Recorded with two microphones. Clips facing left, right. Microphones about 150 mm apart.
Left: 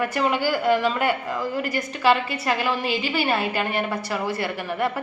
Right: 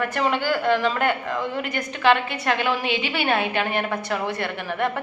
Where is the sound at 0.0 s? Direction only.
5° left (ahead or behind).